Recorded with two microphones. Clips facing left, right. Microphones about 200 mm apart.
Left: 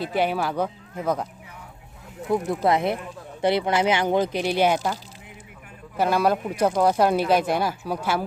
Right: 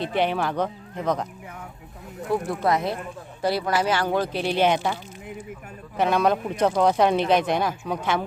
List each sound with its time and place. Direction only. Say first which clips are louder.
0.0 s speech: even; 5° left (ahead or behind)
2.6 s speech: left 2 dB; 25° left (ahead or behind); by 4.9 s 5° left (ahead or behind)
6.0 s speech: even; 5° left (ahead or behind)